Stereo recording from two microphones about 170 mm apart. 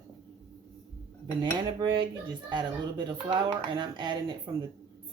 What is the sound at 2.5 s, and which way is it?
Speech, 25° right (ahead or behind).